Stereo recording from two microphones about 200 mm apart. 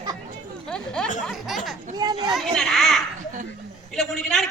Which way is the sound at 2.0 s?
20° right (ahead or behind).